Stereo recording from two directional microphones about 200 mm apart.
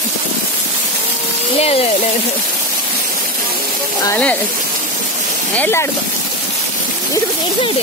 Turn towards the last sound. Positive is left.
turn(degrees=10)  # may be behind; listen again after turning